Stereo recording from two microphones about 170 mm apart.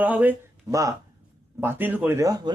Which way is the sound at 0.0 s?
10° right (ahead or behind).